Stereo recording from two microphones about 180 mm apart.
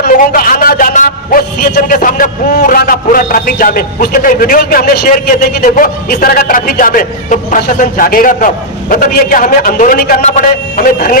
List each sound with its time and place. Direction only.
0.0 s a man's voice: 50° left (ahead or behind)